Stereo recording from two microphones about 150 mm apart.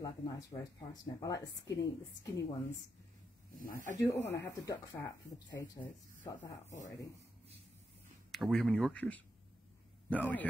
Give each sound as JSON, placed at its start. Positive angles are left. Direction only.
{"t": 0.0, "sound": "speech", "side_deg": 25}
{"t": 3.5, "sound": "speech", "side_deg": 65}
{"t": 4.0, "sound": "speech", "side_deg": 20}
{"t": 8.3, "sound": "a man's voice", "side_deg": 0}